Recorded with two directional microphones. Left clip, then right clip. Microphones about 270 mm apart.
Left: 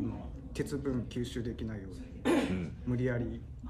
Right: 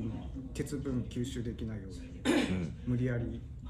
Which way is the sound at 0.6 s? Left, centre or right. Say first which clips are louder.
Left 2 dB; centre.